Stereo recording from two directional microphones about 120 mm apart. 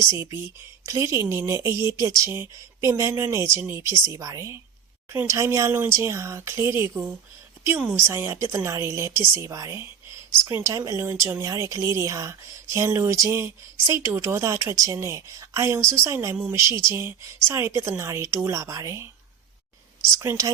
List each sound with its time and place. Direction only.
0.0 s speech: 25° right (ahead or behind)
20.1 s speech: 25° right (ahead or behind)